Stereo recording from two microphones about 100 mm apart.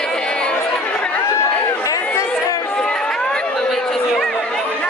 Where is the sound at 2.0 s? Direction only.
25° left (ahead or behind).